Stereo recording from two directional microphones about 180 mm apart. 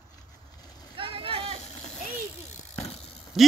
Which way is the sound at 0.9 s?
30° right (ahead or behind).